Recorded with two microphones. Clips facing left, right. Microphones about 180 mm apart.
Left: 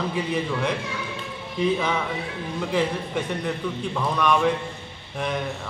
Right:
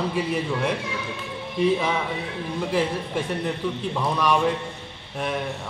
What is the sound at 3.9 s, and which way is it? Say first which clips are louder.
Speech: even; 10° right (ahead or behind).